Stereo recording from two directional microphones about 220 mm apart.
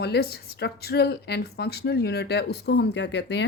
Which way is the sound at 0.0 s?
45° left (ahead or behind).